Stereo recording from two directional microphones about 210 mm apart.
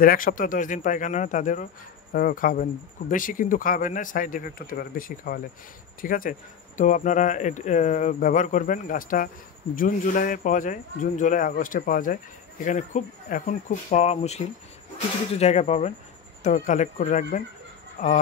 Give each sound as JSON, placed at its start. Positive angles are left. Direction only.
{"t": 0.0, "sound": "speech", "side_deg": 40}